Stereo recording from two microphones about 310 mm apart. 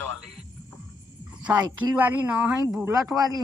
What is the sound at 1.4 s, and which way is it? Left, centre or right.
Speech, centre.